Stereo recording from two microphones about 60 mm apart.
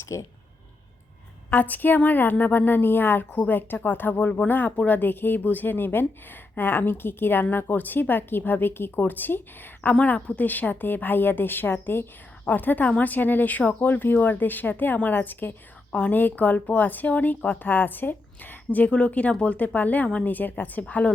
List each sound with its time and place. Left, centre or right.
0.0 s speech: left
1.5 s a woman's voice: left
9.9 s a woman's voice: centre